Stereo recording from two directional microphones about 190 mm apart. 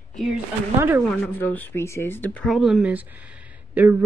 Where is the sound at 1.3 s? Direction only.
10° left (ahead or behind).